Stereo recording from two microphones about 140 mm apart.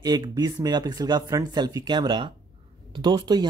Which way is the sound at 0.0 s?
30° right (ahead or behind).